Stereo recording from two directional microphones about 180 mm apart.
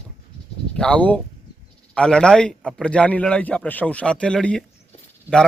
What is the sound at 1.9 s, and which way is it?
Speech, 5° left (ahead or behind).